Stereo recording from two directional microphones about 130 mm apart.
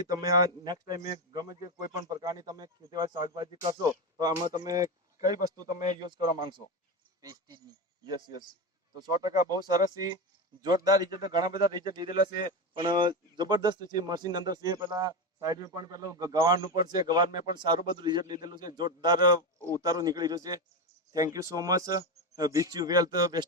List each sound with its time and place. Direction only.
0.1 s speech: 30° right (ahead or behind)
5.4 s speech: 85° left
7.2 s speech: 30° right (ahead or behind)